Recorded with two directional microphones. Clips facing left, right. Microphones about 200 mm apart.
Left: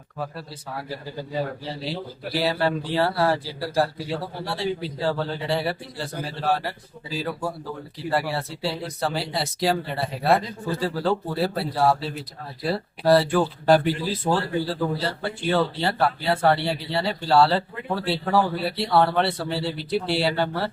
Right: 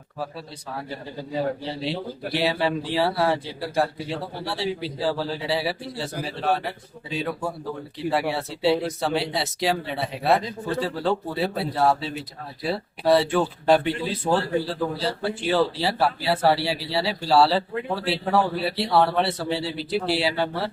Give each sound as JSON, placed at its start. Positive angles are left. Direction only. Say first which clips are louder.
{"t": 1.3, "sound": "speech", "louder": "right 3 dB", "side_deg": 0}